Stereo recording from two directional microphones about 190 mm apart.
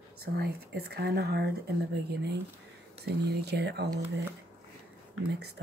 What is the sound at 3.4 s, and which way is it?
Speech, 60° right (ahead or behind).